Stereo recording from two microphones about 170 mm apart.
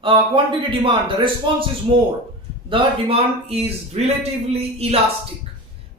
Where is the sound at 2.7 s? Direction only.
35° right (ahead or behind).